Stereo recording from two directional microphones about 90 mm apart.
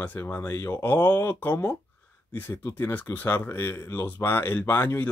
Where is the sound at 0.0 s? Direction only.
25° left (ahead or behind).